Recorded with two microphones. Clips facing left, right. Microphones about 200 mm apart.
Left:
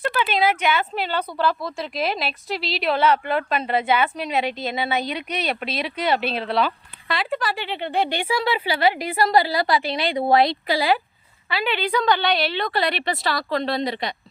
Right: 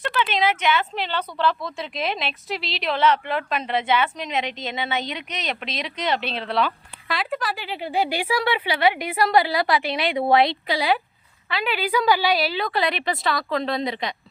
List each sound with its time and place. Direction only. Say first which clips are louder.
0.2 s speech: left 1 dB; 10° left (ahead or behind)
3.9 s a woman's voice: left 1 dB; 35° left (ahead or behind)
5.6 s speech: left 1 dB; 5° left (ahead or behind)
8.5 s a woman's voice: left 1 dB; 35° left (ahead or behind)
8.8 s speech: even; centre (ahead or behind)